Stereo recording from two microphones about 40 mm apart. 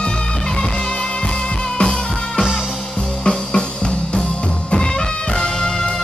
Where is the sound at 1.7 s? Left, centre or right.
Left.